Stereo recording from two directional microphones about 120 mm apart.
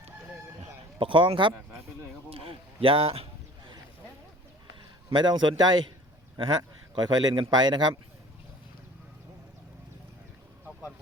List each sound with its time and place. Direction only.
0.9 s speech: 45° right (ahead or behind)
2.3 s a sound: 50° right (ahead or behind)
5.0 s speech: 40° right (ahead or behind)